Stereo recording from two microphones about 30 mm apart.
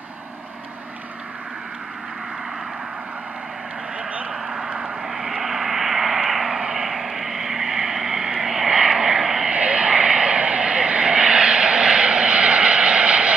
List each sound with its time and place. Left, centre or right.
4.3 s vehicle: centre
6.9 s vehicle: centre
9.5 s vehicle: right